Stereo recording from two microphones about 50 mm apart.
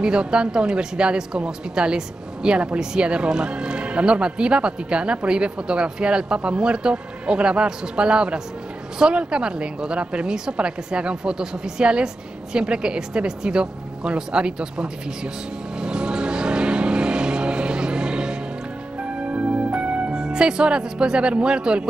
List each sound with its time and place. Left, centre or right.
0.0 s a woman's voice: centre
15.8 s vehicle: centre
19.1 s music: right
20.2 s speech: centre